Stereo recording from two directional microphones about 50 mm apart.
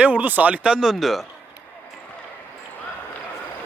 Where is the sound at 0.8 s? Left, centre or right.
Centre.